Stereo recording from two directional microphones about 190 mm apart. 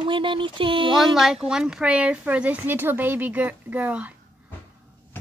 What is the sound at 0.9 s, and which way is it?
Speech, centre (ahead or behind).